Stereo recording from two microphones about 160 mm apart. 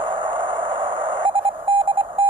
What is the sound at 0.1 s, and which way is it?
Alarm clock, 30° right (ahead or behind).